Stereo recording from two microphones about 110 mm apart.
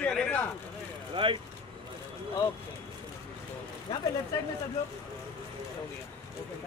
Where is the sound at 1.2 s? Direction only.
55° right (ahead or behind).